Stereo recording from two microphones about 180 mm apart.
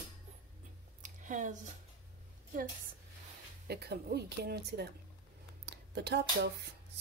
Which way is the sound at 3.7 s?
60° right (ahead or behind).